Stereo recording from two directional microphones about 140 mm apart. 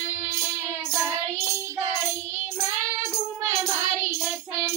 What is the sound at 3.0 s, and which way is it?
Music, 20° right (ahead or behind).